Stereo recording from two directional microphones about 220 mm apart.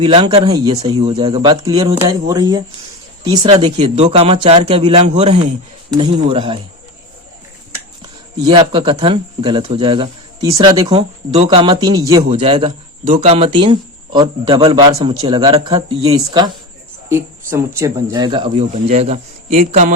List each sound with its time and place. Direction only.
0.0 s speech: 25° right (ahead or behind)
8.4 s speech: 20° right (ahead or behind)
12.3 s speech: 25° right (ahead or behind)